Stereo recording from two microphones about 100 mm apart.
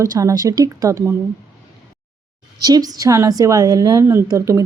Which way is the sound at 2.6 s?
40° right (ahead or behind).